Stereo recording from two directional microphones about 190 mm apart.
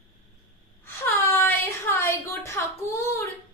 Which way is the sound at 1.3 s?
10° left (ahead or behind).